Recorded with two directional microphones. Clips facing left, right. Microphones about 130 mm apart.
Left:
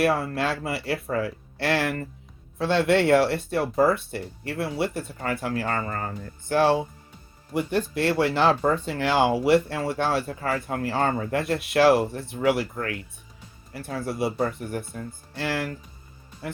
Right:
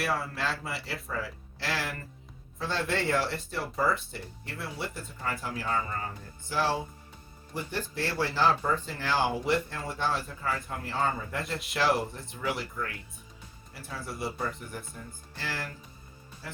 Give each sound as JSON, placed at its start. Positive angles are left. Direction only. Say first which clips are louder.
{"t": 0.0, "sound": "speech", "louder": "left 8 dB", "side_deg": 60}
{"t": 7.5, "sound": "speech", "louder": "left 10 dB", "side_deg": 75}